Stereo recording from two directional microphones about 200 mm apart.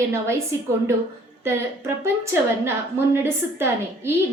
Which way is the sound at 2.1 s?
10° right (ahead or behind).